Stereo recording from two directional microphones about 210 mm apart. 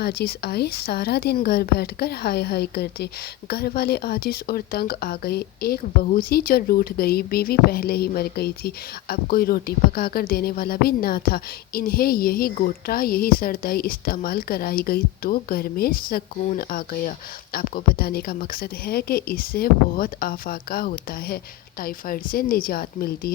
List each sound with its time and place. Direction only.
0.0 s speech: 50° left (ahead or behind)